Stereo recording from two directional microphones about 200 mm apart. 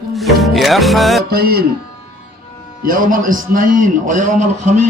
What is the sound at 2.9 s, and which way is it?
A man's voice, 40° right (ahead or behind).